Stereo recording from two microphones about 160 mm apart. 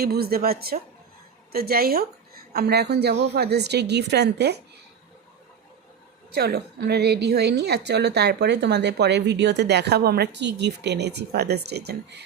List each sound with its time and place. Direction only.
0.0 s a woman's voice: 75° right (ahead or behind)
2.5 s a woman's voice: 85° right
6.3 s a woman's voice: 80° right